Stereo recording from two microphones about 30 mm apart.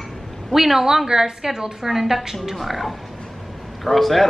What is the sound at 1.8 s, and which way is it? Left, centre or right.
A woman's voice, centre.